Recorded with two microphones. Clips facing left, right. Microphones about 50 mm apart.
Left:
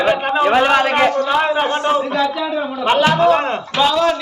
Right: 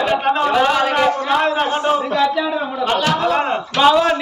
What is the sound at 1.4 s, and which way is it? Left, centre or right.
Speech, centre.